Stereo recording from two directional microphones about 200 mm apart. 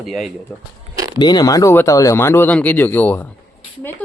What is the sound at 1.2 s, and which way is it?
Speech, 20° left (ahead or behind).